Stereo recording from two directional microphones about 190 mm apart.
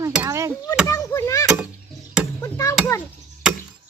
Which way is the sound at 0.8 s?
15° left (ahead or behind).